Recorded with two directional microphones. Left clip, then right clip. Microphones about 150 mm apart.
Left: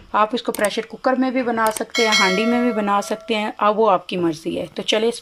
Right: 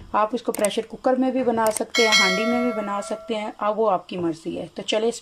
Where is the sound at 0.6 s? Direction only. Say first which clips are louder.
Left 2 dB; 25° right (ahead or behind).